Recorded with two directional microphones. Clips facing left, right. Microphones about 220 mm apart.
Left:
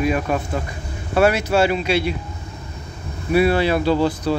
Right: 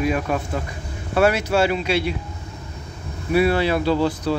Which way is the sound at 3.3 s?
10° left (ahead or behind).